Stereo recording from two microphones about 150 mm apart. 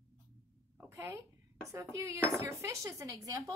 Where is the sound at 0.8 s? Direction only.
20° right (ahead or behind).